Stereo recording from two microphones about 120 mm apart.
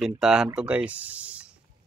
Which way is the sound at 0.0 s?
5° right (ahead or behind).